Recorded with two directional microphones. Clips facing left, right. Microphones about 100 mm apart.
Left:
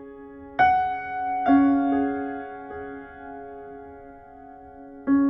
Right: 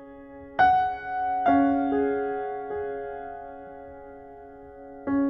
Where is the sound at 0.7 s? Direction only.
5° right (ahead or behind).